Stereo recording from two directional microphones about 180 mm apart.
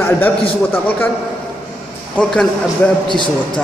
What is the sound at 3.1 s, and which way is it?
Speech, 25° left (ahead or behind).